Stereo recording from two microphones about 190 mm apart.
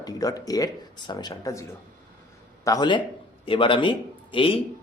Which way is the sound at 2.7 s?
20° left (ahead or behind).